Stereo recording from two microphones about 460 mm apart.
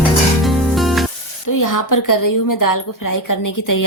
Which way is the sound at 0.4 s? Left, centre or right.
Centre.